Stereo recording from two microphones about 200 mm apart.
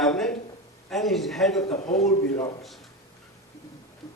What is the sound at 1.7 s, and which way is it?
Speech, 35° left (ahead or behind).